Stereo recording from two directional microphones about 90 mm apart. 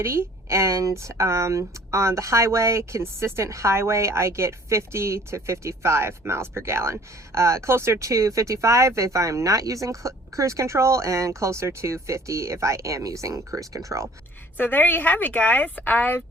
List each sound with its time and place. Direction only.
0.0 s speech: 30° right (ahead or behind)
14.6 s a woman's voice: 20° left (ahead or behind)